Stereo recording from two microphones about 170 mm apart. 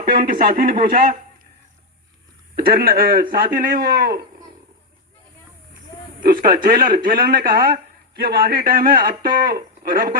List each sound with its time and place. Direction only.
0.1 s speech: 60° right (ahead or behind)
2.6 s speech: 65° right (ahead or behind)
6.2 s speech: 60° right (ahead or behind)